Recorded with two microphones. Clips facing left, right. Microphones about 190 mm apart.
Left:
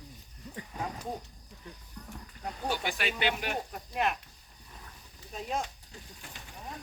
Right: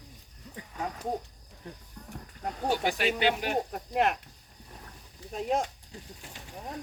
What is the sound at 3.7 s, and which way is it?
Speech, 60° right (ahead or behind).